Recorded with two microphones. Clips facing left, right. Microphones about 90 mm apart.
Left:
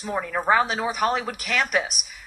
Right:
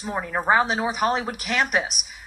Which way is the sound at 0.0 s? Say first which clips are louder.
Even; 20° right (ahead or behind).